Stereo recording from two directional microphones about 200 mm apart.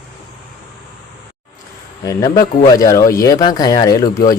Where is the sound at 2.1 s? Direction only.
20° left (ahead or behind).